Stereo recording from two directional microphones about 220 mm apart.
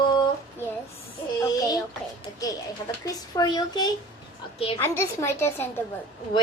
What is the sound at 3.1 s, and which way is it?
A child's voice, 20° left (ahead or behind).